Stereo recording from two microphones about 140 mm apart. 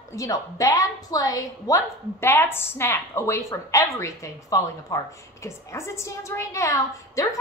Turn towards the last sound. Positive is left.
turn(degrees=25)  # may be behind; listen again after turning